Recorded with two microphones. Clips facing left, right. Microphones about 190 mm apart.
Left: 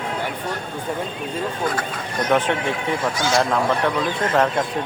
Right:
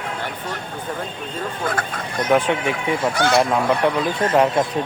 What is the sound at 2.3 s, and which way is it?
Speech, 10° right (ahead or behind).